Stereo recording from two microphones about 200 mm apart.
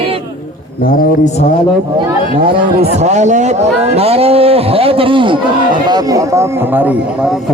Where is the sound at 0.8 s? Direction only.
45° left (ahead or behind).